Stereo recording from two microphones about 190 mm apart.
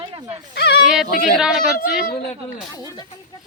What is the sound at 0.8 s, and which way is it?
A woman's voice, 5° right (ahead or behind).